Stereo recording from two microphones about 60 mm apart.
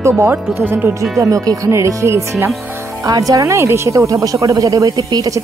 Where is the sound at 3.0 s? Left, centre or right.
Right.